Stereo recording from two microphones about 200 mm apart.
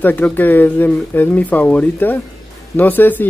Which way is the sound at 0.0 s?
10° left (ahead or behind).